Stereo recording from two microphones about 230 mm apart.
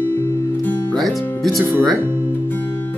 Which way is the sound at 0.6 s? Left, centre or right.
Centre.